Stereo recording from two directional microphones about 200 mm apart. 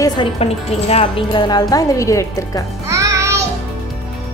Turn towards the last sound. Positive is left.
turn(degrees=-15)  # may be behind; listen again after turning